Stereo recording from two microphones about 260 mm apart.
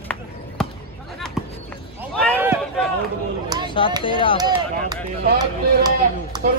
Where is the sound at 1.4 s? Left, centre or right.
Centre.